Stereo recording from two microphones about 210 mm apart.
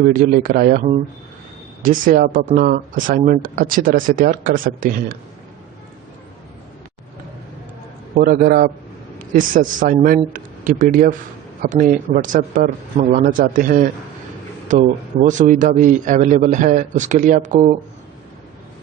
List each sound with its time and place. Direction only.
0.0 s a man's voice: 40° right (ahead or behind)
8.2 s a man's voice: 40° right (ahead or behind)